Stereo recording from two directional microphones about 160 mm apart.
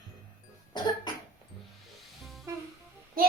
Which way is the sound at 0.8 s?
25° left (ahead or behind).